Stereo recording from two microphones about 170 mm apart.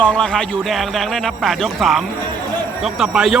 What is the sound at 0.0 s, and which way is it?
Speech, 5° left (ahead or behind).